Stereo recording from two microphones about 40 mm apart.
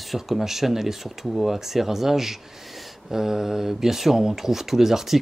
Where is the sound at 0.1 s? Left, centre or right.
Centre.